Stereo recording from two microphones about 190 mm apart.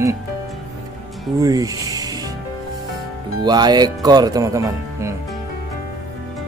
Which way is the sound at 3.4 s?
20° right (ahead or behind).